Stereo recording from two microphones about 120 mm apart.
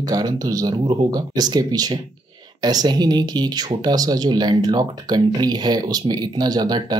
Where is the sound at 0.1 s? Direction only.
30° right (ahead or behind).